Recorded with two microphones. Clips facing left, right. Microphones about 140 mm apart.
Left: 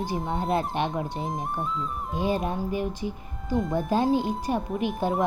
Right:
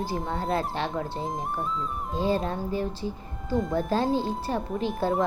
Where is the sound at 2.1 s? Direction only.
15° left (ahead or behind).